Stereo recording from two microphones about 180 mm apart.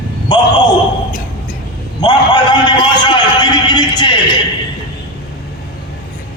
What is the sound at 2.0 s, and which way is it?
A man's voice, 25° left (ahead or behind).